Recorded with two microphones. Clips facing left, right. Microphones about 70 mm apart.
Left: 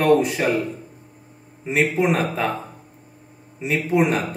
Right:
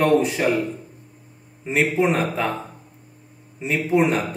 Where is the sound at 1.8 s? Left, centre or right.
Centre.